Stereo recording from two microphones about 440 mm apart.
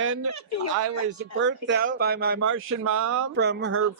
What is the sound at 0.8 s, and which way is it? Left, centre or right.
Speech, right.